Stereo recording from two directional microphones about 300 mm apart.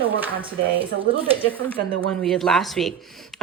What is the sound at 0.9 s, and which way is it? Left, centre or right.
Speech, centre.